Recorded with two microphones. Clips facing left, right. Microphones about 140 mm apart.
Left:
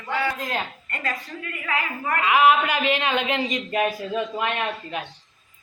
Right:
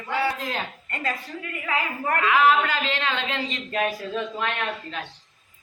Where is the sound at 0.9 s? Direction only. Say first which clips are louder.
Right 1 dB; 25° right (ahead or behind).